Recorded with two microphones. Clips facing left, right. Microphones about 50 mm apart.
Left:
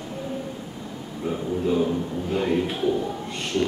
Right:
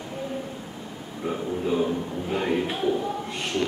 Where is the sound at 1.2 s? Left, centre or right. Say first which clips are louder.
Left 2 dB; centre.